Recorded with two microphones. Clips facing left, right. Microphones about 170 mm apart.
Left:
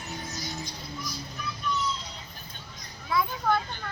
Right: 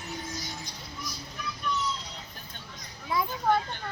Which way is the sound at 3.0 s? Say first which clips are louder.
Even; 15° right (ahead or behind).